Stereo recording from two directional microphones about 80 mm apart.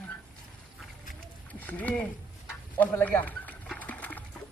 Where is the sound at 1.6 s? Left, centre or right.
Centre.